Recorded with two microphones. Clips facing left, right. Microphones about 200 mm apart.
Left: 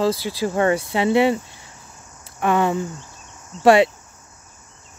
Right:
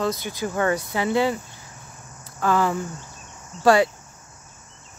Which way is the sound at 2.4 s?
20° left (ahead or behind).